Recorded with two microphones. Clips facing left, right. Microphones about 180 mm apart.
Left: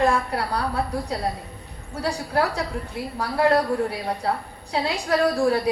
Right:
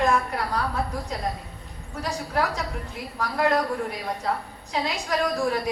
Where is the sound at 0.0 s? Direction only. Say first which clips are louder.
Left 2 dB; 35° left (ahead or behind).